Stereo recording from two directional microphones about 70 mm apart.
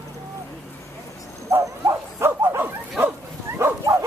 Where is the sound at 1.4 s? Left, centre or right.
Right.